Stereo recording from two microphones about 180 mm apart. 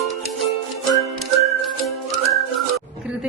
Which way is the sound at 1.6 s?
Centre (ahead or behind).